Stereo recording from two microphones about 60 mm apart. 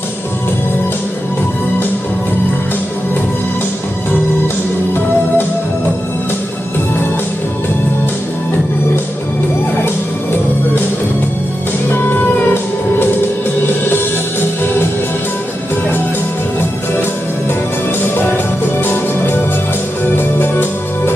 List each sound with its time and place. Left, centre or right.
11.9 s music: left
13.7 s music: left
18.8 s music: left